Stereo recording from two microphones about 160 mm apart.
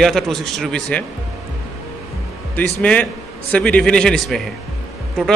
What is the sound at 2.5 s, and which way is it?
A man's voice, 10° left (ahead or behind).